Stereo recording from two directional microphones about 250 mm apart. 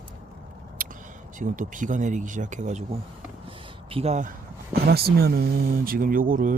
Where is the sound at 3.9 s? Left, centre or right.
Right.